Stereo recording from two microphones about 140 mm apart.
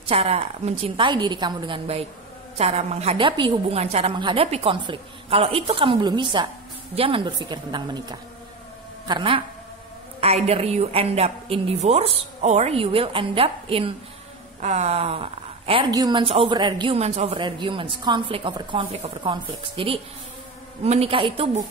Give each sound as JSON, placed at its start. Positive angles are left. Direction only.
{"t": 0.1, "sound": "a woman's voice", "side_deg": -45}
{"t": 1.0, "sound": "speech", "side_deg": -35}
{"t": 2.5, "sound": "a woman's voice", "side_deg": -50}
{"t": 3.2, "sound": "speech", "side_deg": -35}
{"t": 3.8, "sound": "a woman's voice", "side_deg": -50}
{"t": 4.1, "sound": "speech", "side_deg": -35}
{"t": 10.2, "sound": "a woman's voice", "side_deg": -50}
{"t": 14.6, "sound": "speech", "side_deg": -55}
{"t": 15.9, "sound": "speech", "side_deg": -30}
{"t": 17.0, "sound": "a woman's voice", "side_deg": -50}
{"t": 17.4, "sound": "a woman's voice", "side_deg": -35}